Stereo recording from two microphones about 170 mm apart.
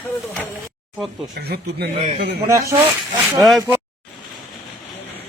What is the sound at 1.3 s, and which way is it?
Speech, 70° right (ahead or behind).